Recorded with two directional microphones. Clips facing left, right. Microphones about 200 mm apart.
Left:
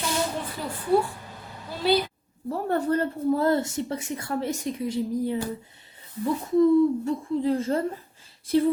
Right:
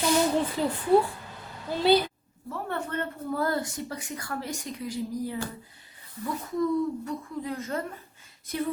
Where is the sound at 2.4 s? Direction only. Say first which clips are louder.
Left 8 dB; 35° left (ahead or behind).